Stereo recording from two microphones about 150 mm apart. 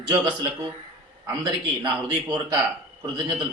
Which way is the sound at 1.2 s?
30° right (ahead or behind).